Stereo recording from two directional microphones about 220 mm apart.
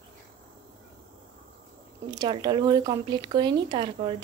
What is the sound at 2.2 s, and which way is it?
Speech, 20° right (ahead or behind).